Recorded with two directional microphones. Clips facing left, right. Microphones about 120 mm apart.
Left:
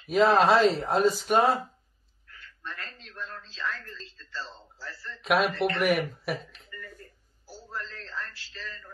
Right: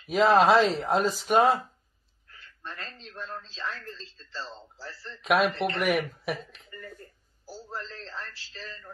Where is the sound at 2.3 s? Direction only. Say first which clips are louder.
Left 1 dB; 30° right (ahead or behind).